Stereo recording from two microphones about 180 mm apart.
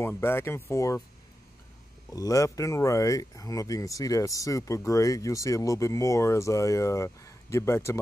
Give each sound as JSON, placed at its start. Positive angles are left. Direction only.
{"t": 0.0, "sound": "speech", "side_deg": 15}
{"t": 2.0, "sound": "speech", "side_deg": 20}